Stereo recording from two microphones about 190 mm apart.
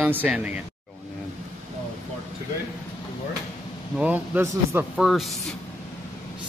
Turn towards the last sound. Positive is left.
turn(degrees=0)  # may be behind; listen again after turning